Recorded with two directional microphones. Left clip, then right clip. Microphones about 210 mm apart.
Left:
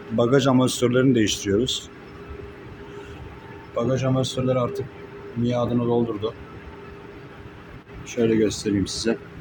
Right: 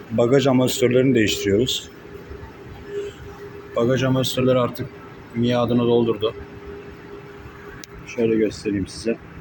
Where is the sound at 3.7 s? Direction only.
Centre (ahead or behind).